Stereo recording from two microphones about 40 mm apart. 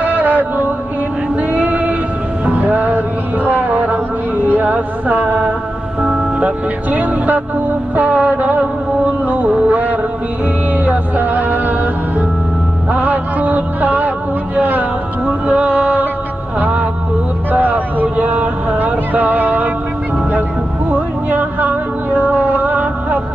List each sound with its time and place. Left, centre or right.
0.0 s music: right
4.7 s speech: right
7.9 s music: right
15.2 s music: right
16.5 s a sound: right
20.9 s a sound: right